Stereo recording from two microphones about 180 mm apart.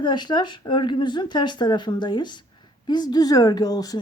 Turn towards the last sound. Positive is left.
turn(degrees=20)  # may be behind; listen again after turning